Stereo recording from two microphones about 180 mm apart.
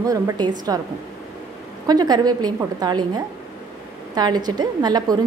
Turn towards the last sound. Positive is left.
turn(degrees=-20)  # may be behind; listen again after turning